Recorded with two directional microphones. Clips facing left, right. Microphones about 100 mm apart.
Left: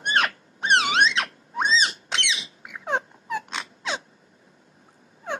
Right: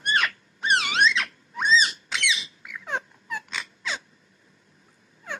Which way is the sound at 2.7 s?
50° left (ahead or behind).